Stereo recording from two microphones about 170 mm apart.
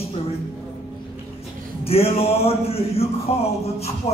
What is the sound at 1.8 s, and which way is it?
Speech, 35° left (ahead or behind).